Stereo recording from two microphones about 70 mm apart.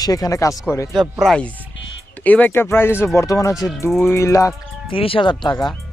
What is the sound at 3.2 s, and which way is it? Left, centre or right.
Speech, left.